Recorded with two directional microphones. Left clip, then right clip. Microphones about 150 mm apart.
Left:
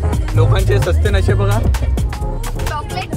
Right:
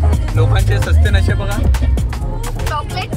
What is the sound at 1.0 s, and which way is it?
Speech, 50° left (ahead or behind).